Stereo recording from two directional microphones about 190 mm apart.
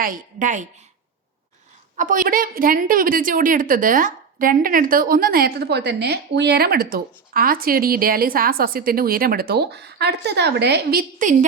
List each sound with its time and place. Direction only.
0.0 s a woman's voice: 45° right (ahead or behind)
2.0 s a woman's voice: 45° right (ahead or behind)